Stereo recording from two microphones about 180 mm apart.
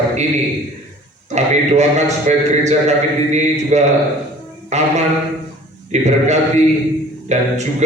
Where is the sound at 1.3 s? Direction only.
40° right (ahead or behind).